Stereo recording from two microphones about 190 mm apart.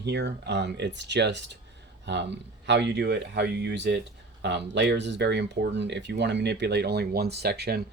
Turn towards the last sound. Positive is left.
turn(degrees=-60)  # may be behind; listen again after turning